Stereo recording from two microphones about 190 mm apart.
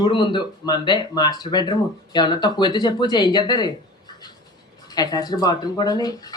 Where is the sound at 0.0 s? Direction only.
25° left (ahead or behind).